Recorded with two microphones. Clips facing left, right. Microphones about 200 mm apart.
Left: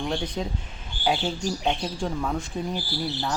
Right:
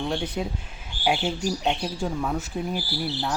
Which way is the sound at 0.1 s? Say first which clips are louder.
Right 1 dB; 5° right (ahead or behind).